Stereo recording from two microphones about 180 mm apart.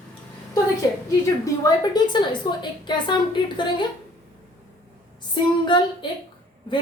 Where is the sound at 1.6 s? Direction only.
25° left (ahead or behind).